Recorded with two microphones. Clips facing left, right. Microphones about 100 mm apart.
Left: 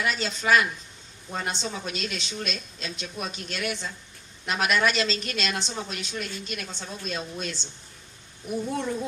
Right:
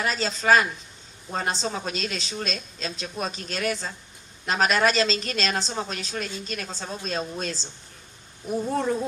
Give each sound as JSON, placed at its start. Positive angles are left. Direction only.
{"t": 0.0, "sound": "a woman's voice", "side_deg": -35}